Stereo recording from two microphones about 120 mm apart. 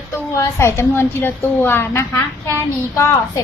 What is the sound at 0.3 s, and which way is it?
A woman's voice, 25° left (ahead or behind).